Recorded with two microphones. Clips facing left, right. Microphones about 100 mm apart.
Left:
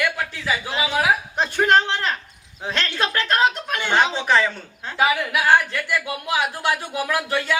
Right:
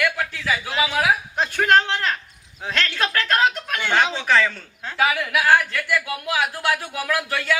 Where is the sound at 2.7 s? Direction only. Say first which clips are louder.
Even; 25° left (ahead or behind).